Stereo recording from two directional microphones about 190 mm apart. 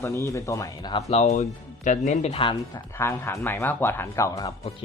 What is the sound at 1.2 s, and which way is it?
Speech, 40° left (ahead or behind).